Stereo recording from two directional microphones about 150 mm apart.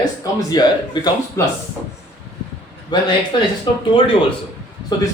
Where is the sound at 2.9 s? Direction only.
30° left (ahead or behind).